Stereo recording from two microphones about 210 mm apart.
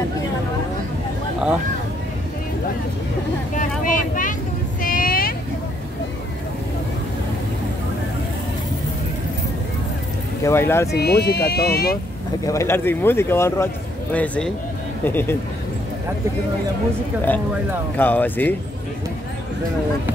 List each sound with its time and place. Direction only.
3.8 s vehicle: 40° left (ahead or behind)
10.4 s speech: 10° left (ahead or behind)
11.0 s speech: 50° left (ahead or behind)
12.4 s speech: 15° left (ahead or behind)
17.9 s speech: 10° left (ahead or behind)